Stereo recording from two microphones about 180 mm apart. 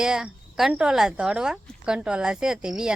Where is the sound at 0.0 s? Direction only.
5° right (ahead or behind).